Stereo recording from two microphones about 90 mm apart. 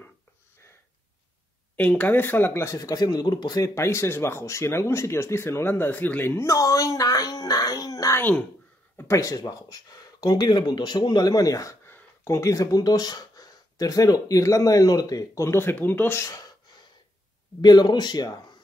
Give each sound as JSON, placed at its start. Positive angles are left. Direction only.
{"t": 1.8, "sound": "speech", "side_deg": 15}
{"t": 3.7, "sound": "speech", "side_deg": 30}
{"t": 8.2, "sound": "speech", "side_deg": 20}
{"t": 8.9, "sound": "speech", "side_deg": 35}
{"t": 11.8, "sound": "speech", "side_deg": 30}
{"t": 17.6, "sound": "speech", "side_deg": 55}